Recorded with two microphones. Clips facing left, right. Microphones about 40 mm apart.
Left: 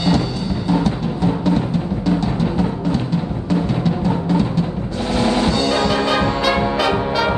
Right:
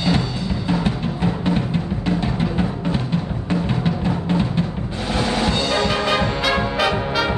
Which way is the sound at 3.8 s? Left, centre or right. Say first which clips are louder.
Left 3 dB; right.